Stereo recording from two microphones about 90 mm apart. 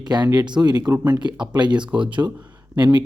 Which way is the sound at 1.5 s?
55° right (ahead or behind).